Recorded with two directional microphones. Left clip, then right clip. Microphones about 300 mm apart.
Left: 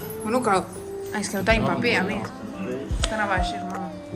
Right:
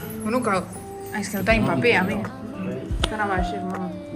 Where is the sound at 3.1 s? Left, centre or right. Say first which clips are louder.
Left 1 dB; centre.